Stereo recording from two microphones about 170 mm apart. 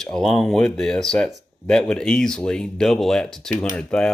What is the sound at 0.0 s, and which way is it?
Speech, 5° left (ahead or behind).